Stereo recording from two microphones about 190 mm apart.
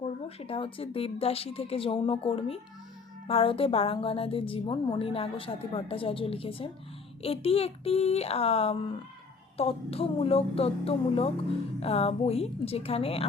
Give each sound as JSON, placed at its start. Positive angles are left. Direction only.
{"t": 0.0, "sound": "a woman's voice", "side_deg": 30}